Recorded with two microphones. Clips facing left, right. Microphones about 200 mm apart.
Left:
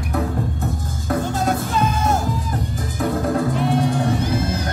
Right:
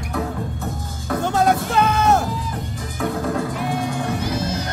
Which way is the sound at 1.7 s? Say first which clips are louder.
Right 2 dB; 70° right (ahead or behind).